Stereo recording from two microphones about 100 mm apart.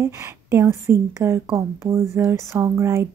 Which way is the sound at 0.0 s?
30° right (ahead or behind).